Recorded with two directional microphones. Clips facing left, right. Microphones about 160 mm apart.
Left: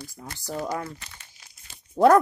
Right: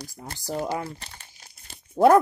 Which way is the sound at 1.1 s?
45° right (ahead or behind).